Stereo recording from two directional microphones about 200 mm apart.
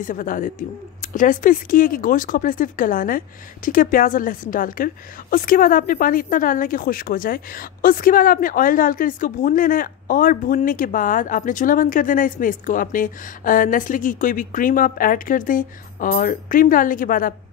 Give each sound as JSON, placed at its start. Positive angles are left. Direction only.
{"t": 0.0, "sound": "speech", "side_deg": 40}